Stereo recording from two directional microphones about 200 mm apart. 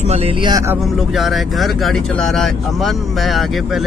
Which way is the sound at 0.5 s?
15° right (ahead or behind).